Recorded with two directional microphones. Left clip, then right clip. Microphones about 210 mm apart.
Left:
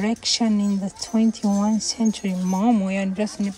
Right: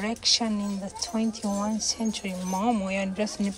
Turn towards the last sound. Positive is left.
turn(degrees=30)  # may be behind; listen again after turning